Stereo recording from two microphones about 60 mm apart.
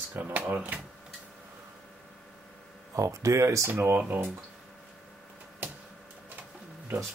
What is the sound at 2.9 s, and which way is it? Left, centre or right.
Speech, right.